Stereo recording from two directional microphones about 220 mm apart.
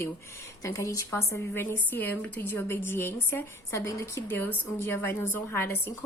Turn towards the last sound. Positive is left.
turn(degrees=10)  # may be behind; listen again after turning